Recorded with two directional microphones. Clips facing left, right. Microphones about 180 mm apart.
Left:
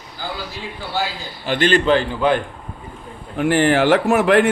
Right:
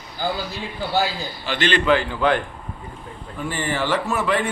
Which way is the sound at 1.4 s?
50° left (ahead or behind).